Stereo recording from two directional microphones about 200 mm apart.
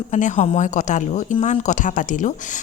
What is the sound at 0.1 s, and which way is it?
A woman's voice, 35° left (ahead or behind).